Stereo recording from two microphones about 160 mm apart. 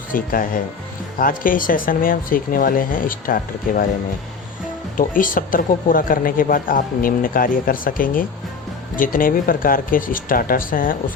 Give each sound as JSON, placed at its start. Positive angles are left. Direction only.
{"t": 0.1, "sound": "speech", "side_deg": 60}
{"t": 4.9, "sound": "speech", "side_deg": 60}